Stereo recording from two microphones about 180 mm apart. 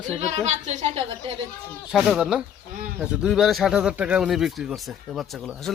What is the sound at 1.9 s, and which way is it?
Speech, 5° right (ahead or behind).